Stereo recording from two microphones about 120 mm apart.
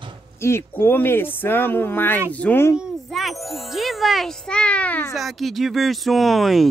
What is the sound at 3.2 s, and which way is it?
Speech, centre (ahead or behind).